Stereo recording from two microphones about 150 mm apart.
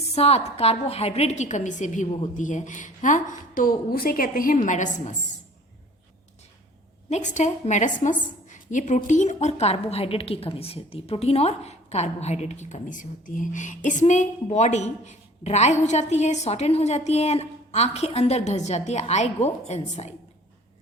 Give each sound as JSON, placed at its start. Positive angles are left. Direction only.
{"t": 0.1, "sound": "a woman's voice", "side_deg": 45}
{"t": 7.1, "sound": "a woman's voice", "side_deg": 55}